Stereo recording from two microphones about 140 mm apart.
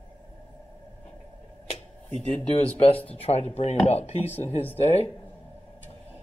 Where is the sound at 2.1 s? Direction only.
50° left (ahead or behind).